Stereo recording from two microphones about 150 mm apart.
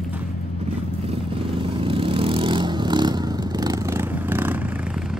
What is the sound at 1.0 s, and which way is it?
Vehicle, 40° right (ahead or behind).